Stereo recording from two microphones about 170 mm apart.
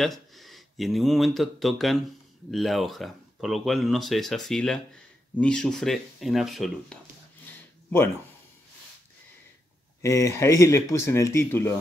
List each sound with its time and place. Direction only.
0.0 s speech: centre (ahead or behind)
10.0 s speech: 15° left (ahead or behind)